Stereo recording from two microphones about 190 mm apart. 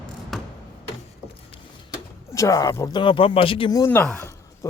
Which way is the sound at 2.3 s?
15° left (ahead or behind).